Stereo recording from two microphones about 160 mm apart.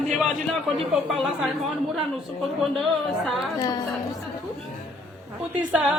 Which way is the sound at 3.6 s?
25° left (ahead or behind).